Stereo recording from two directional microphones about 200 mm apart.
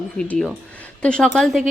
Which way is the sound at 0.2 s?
5° left (ahead or behind).